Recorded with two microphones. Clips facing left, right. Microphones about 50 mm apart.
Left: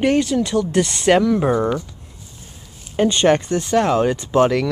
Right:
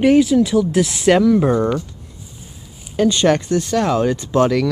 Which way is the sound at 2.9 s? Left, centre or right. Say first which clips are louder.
Even; left.